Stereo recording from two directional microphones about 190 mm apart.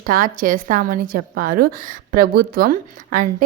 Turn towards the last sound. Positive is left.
turn(degrees=-45)  # may be behind; listen again after turning